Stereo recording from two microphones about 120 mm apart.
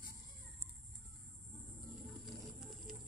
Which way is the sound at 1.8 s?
Centre (ahead or behind).